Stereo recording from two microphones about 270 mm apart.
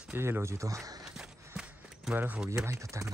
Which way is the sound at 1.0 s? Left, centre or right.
Centre.